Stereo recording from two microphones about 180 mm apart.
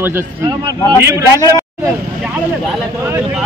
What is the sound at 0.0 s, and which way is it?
Speech, 15° right (ahead or behind).